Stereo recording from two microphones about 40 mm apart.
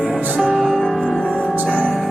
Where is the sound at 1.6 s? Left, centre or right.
Right.